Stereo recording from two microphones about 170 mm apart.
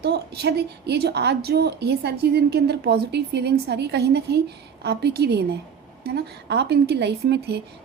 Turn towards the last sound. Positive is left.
turn(degrees=-75)  # may be behind; listen again after turning